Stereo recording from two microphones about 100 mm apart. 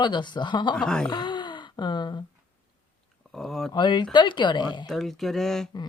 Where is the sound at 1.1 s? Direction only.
50° left (ahead or behind).